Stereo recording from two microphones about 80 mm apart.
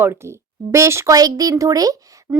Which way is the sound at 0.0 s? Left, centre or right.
Right.